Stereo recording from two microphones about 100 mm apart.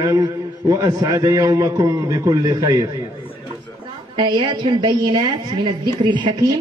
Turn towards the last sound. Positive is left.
turn(degrees=-50)  # may be behind; listen again after turning